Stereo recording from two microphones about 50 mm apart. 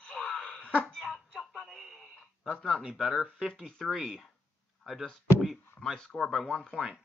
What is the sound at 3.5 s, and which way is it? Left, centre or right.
Speech, centre.